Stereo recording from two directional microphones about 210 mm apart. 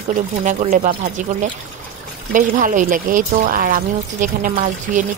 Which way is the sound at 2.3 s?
40° right (ahead or behind).